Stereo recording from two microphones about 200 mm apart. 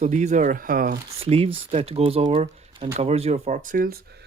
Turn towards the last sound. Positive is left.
turn(degrees=-45)  # may be behind; listen again after turning